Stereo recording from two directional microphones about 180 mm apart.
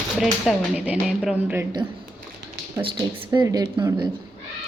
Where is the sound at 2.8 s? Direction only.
20° right (ahead or behind).